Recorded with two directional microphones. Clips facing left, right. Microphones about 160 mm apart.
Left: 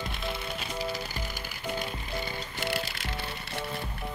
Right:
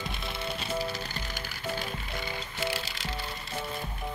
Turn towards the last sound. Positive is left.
turn(degrees=55)  # may be behind; listen again after turning